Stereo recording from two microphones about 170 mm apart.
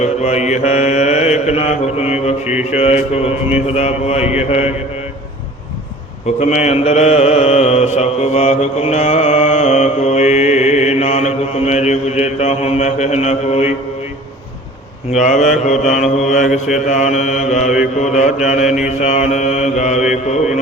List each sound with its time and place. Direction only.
0.0 s mantra: 40° left (ahead or behind)
6.2 s mantra: 40° left (ahead or behind)
15.1 s mantra: 45° left (ahead or behind)